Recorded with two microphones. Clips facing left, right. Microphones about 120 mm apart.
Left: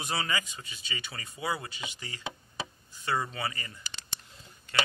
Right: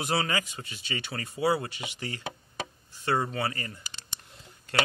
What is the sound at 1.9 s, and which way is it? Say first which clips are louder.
Speech: right 4 dB; 55° right (ahead or behind).